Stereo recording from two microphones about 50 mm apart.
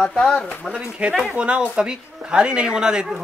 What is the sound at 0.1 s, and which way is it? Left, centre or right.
Speech, centre.